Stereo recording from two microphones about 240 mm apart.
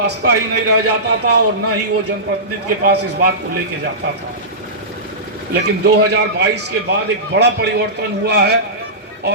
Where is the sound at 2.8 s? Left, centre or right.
Right.